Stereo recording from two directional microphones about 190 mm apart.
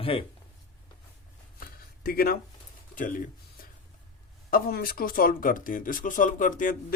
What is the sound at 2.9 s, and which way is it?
Speech, 45° left (ahead or behind).